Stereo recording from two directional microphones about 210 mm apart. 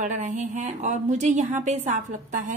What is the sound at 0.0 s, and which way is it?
A woman's voice, 35° right (ahead or behind).